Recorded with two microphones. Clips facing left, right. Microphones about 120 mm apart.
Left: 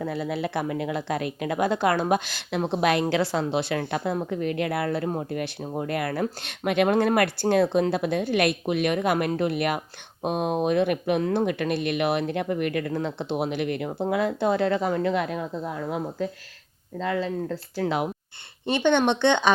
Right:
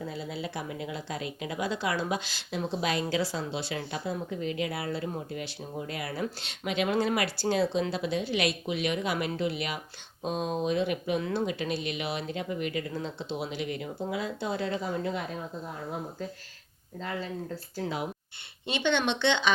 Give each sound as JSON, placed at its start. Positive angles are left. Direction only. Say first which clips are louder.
{"t": 0.0, "sound": "speech", "louder": "left 8 dB", "side_deg": 65}
{"t": 17.0, "sound": "speech", "louder": "left 8 dB", "side_deg": 90}
{"t": 17.7, "sound": "speech", "louder": "left 7 dB", "side_deg": 70}
{"t": 18.6, "sound": "speech", "louder": "left 7 dB", "side_deg": 50}